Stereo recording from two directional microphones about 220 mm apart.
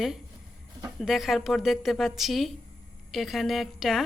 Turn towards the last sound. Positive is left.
turn(degrees=0)  # may be behind; listen again after turning